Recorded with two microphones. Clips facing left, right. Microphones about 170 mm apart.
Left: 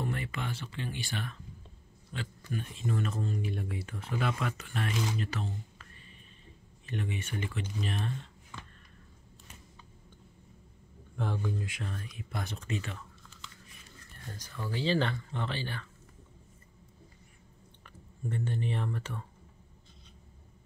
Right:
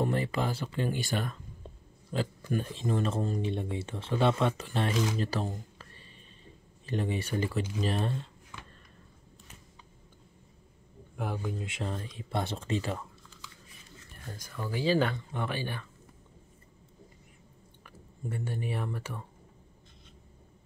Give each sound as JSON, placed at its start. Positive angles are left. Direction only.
{"t": 0.0, "sound": "speech", "side_deg": -35}
{"t": 3.4, "sound": "speech", "side_deg": -25}
{"t": 11.1, "sound": "speech", "side_deg": -10}
{"t": 14.3, "sound": "speech", "side_deg": -10}
{"t": 18.2, "sound": "speech", "side_deg": -10}